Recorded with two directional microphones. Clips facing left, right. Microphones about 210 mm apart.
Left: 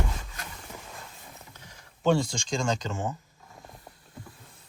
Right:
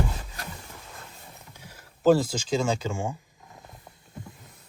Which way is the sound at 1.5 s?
10° right (ahead or behind).